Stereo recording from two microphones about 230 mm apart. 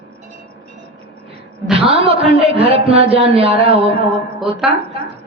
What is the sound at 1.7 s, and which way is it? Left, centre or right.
A woman's voice, right.